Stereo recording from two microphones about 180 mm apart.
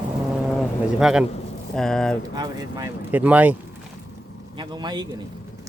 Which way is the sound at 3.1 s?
10° right (ahead or behind).